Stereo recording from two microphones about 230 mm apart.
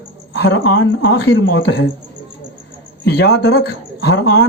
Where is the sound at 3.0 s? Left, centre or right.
Left.